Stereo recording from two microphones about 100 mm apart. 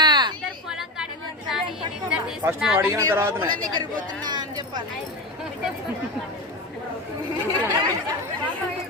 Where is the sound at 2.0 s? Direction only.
20° right (ahead or behind).